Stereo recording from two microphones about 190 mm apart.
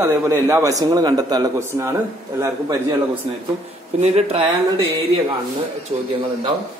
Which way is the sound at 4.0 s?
35° right (ahead or behind).